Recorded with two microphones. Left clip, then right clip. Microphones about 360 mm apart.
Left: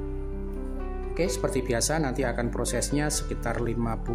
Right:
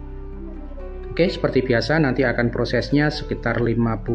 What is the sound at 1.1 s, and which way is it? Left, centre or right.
Speech, left.